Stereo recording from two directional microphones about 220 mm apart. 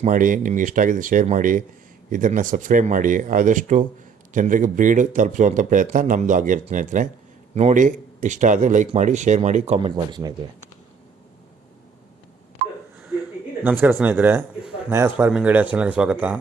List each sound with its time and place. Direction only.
0.0 s speech: 35° right (ahead or behind); by 10.3 s 20° right (ahead or behind)
13.7 s speech: 10° right (ahead or behind)